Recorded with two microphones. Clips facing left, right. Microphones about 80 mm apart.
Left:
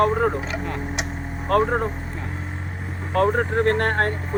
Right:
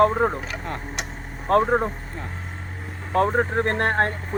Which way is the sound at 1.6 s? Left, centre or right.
Centre.